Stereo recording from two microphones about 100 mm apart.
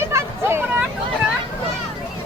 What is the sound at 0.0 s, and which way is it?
Vehicle, 30° right (ahead or behind).